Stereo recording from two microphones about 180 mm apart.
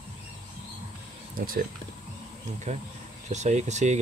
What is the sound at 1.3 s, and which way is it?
Speech, 50° right (ahead or behind).